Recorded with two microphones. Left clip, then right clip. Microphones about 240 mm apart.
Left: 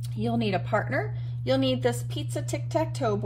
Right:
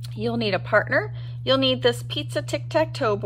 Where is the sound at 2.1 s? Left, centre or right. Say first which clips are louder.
Right 7 dB; right.